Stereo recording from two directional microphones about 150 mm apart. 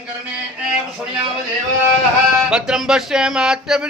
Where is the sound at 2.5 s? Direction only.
5° right (ahead or behind).